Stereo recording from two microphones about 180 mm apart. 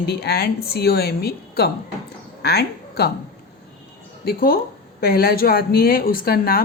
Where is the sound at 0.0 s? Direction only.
65° left (ahead or behind).